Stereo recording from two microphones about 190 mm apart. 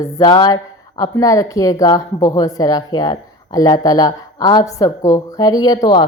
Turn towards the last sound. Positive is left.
turn(degrees=20)  # may be behind; listen again after turning